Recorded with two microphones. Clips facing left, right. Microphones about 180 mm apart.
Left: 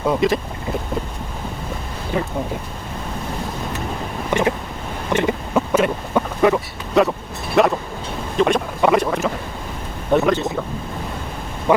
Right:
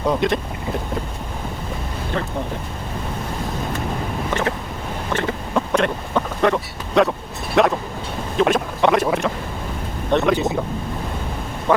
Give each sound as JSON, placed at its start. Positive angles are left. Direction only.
{"t": 0.0, "sound": "speech", "side_deg": 5}
{"t": 2.1, "sound": "boat", "side_deg": 10}
{"t": 4.3, "sound": "boat", "side_deg": 15}
{"t": 5.5, "sound": "speech", "side_deg": 5}